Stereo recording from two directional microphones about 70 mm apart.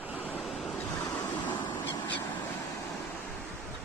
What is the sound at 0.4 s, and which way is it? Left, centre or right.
Waves, centre.